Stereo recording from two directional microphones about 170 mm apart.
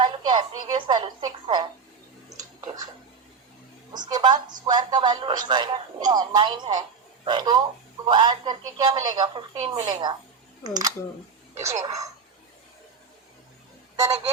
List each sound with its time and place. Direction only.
0.0 s speech: 25° right (ahead or behind)
2.3 s a sound: 20° right (ahead or behind)
3.9 s a man's voice: 25° right (ahead or behind)
13.9 s speech: 20° right (ahead or behind)